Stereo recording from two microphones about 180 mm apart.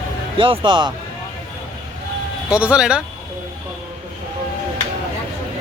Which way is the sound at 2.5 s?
5° right (ahead or behind).